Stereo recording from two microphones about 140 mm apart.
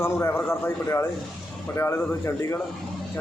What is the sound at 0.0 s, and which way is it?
Speech, 20° left (ahead or behind).